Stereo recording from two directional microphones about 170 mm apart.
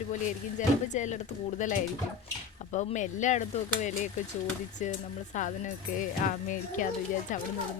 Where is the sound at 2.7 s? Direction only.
45° left (ahead or behind).